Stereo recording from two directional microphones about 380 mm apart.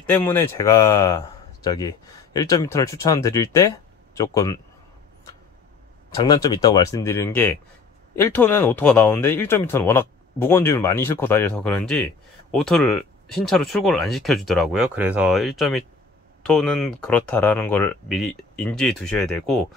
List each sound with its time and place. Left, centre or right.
0.0 s speech: centre
6.0 s speech: centre